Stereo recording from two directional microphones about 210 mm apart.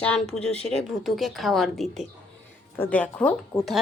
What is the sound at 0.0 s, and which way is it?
Speech, 5° left (ahead or behind).